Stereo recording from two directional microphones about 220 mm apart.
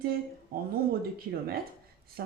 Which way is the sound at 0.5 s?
40° right (ahead or behind).